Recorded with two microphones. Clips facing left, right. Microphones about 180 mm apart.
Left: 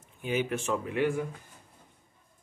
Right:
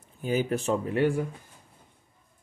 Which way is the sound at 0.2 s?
35° right (ahead or behind).